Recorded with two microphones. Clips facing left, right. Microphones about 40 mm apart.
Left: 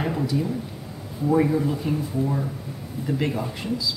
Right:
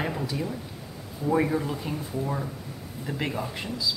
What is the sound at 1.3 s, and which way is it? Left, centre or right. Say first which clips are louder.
Speech: left 4 dB; centre.